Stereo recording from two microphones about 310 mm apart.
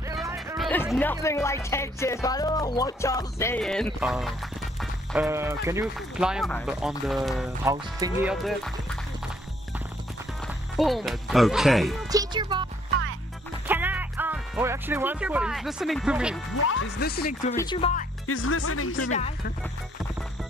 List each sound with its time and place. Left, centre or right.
0.2 s music: centre
0.7 s speech: centre
10.4 s speech: centre
12.1 s speech: centre
13.7 s speech: centre
16.6 s speech: left
17.6 s speech: centre
18.2 s speech: left
19.1 s speech: left